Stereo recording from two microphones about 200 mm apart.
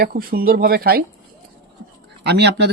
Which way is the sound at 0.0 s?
45° right (ahead or behind).